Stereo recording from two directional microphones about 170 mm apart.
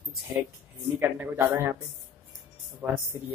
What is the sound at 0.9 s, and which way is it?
Speech, 10° right (ahead or behind).